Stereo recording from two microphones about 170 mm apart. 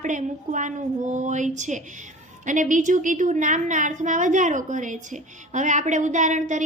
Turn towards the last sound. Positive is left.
turn(degrees=-45)  # may be behind; listen again after turning